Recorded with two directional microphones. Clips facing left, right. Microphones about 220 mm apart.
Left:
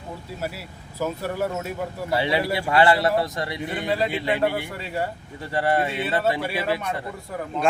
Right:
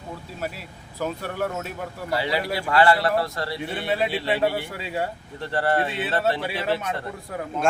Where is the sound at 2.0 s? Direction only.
25° left (ahead or behind).